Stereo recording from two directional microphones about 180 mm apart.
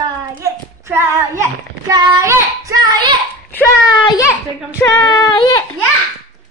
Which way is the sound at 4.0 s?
20° left (ahead or behind).